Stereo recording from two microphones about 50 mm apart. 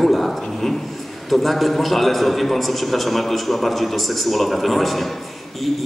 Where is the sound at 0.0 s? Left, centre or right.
Centre.